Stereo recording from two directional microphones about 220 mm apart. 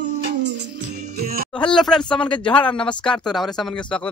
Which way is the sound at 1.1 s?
45° right (ahead or behind).